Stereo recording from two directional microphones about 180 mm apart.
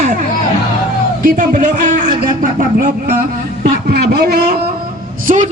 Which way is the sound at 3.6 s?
60° right (ahead or behind).